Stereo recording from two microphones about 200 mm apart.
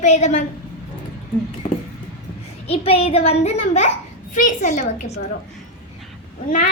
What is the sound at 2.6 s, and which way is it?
A child's voice, 30° left (ahead or behind).